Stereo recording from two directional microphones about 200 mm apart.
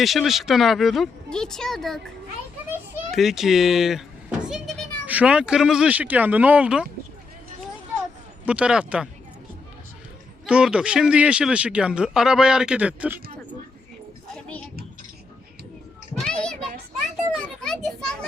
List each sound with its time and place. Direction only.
0.0 s speech: centre (ahead or behind)
8.4 s speech: 5° right (ahead or behind)
10.4 s speech: 5° right (ahead or behind)
14.3 s a sound: 5° left (ahead or behind)
16.1 s children playing: 5° left (ahead or behind)